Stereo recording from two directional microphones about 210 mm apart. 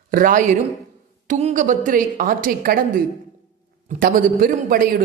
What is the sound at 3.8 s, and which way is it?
A man's voice, 40° right (ahead or behind).